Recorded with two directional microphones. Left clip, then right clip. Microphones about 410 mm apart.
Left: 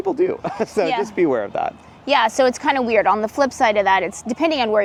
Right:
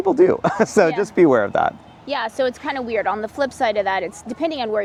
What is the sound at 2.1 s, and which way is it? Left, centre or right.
Speech, left.